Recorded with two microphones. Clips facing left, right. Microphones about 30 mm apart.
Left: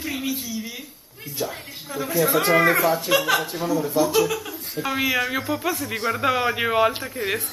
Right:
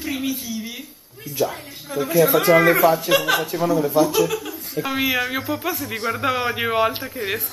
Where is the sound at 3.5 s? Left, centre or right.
Right.